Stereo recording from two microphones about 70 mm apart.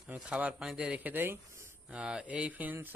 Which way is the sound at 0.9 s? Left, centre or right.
Right.